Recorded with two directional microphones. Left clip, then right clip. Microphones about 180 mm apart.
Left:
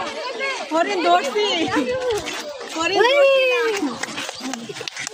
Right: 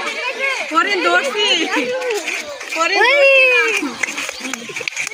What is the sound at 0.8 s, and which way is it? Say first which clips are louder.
Speech: right 3 dB; 45° left (ahead or behind).